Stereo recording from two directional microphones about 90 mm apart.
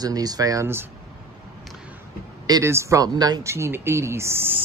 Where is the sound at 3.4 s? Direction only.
30° right (ahead or behind).